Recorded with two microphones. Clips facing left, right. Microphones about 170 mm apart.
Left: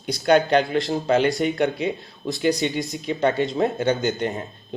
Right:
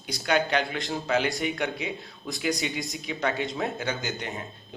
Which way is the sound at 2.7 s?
Centre (ahead or behind).